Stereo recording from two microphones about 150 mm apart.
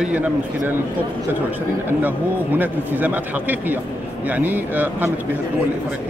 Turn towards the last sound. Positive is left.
turn(degrees=-10)  # may be behind; listen again after turning